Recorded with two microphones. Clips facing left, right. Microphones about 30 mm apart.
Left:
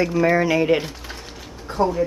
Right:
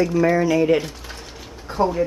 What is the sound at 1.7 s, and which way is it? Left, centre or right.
Speech, centre.